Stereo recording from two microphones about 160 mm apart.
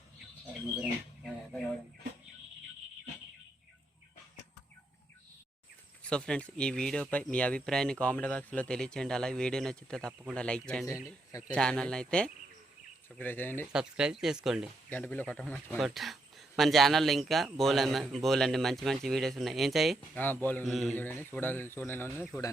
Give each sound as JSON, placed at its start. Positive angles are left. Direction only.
{"t": 0.8, "sound": "bird", "side_deg": 0}
{"t": 6.0, "sound": "speech", "side_deg": 5}
{"t": 11.3, "sound": "speech", "side_deg": 20}
{"t": 11.5, "sound": "speech", "side_deg": 5}
{"t": 13.7, "sound": "speech", "side_deg": -5}
{"t": 14.8, "sound": "speech", "side_deg": 10}
{"t": 20.0, "sound": "speech", "side_deg": 10}
{"t": 20.7, "sound": "speech", "side_deg": 0}
{"t": 20.9, "sound": "speech", "side_deg": 10}